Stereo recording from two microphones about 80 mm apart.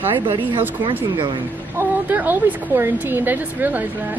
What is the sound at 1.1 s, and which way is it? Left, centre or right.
Speech, right.